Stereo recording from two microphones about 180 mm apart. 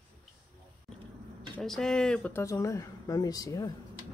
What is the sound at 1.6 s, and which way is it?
Speech, centre (ahead or behind).